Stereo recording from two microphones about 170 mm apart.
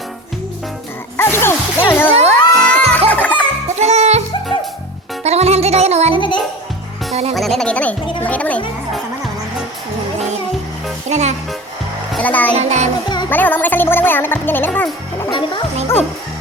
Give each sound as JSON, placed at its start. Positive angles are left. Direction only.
{"t": 1.1, "sound": "music", "side_deg": 15}
{"t": 3.8, "sound": "music", "side_deg": -40}
{"t": 5.2, "sound": "music", "side_deg": -40}
{"t": 6.1, "sound": "music", "side_deg": 30}
{"t": 7.1, "sound": "music", "side_deg": -35}
{"t": 7.3, "sound": "a woman's voice", "side_deg": 0}
{"t": 11.1, "sound": "music", "side_deg": -40}
{"t": 12.1, "sound": "a child's voice", "side_deg": 10}
{"t": 12.5, "sound": "music", "side_deg": -40}
{"t": 13.3, "sound": "a woman's voice", "side_deg": 10}
{"t": 15.3, "sound": "speech", "side_deg": 30}